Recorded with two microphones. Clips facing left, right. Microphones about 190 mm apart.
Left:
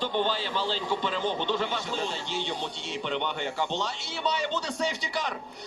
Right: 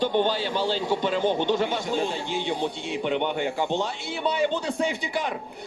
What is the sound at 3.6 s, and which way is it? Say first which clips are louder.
Speech: right 5 dB; 55° right (ahead or behind).